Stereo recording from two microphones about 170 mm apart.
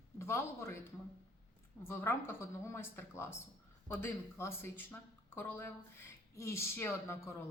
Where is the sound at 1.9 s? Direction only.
15° left (ahead or behind).